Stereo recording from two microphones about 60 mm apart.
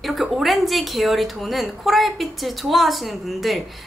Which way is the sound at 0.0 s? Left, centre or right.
Centre.